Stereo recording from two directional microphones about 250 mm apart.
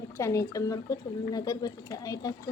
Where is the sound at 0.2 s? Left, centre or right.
Centre.